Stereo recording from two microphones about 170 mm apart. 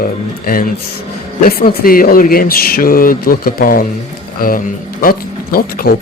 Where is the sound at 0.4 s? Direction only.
60° left (ahead or behind).